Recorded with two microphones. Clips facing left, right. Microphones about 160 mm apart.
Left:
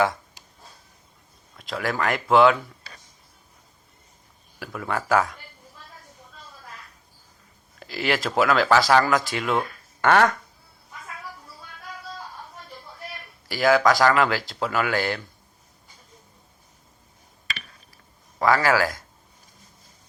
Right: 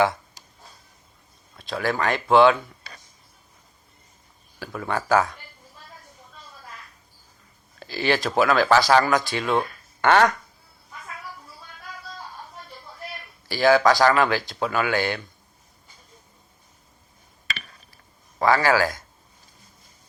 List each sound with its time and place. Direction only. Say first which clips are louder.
1.5 s speech: right 2 dB; 25° right (ahead or behind)
4.6 s speech: right 1 dB; 25° right (ahead or behind)
7.8 s speech: right 2 dB; 25° right (ahead or behind)
13.5 s speech: right 1 dB; 25° right (ahead or behind)
18.3 s speech: right 1 dB; 25° right (ahead or behind)